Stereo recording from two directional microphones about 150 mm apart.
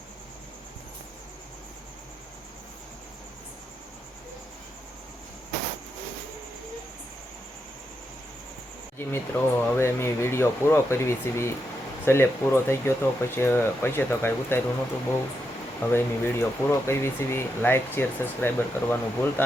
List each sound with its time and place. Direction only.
9.0 s speech: 15° left (ahead or behind)
15.8 s speech: 15° left (ahead or behind)